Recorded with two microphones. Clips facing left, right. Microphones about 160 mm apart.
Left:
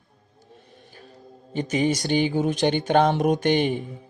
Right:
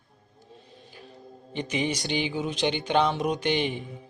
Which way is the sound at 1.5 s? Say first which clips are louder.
Left 6 dB; 45° left (ahead or behind).